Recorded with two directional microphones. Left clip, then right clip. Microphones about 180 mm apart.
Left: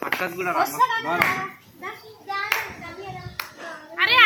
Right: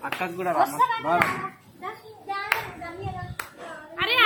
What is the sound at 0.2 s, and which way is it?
Speech, 65° right (ahead or behind).